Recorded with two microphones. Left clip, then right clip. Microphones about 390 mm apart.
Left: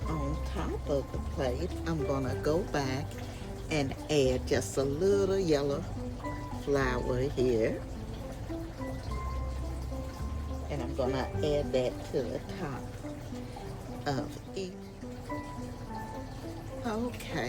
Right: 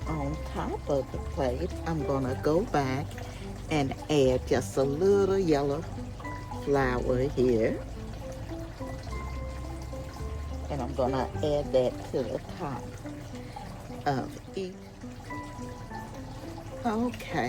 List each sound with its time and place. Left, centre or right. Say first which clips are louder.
0.9 s speech: right 3 dB; centre
10.9 s speech: right 3 dB; centre
14.0 s speech: right 5 dB; centre
16.8 s speech: right 5 dB; centre